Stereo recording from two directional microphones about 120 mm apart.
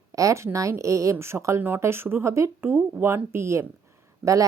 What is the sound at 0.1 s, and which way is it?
A woman's voice, 25° right (ahead or behind).